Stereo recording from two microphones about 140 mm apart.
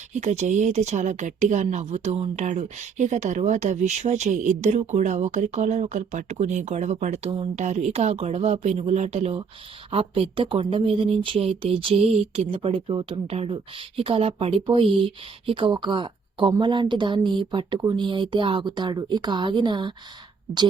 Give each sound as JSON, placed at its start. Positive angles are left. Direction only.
{"t": 0.1, "sound": "a woman's voice", "side_deg": -55}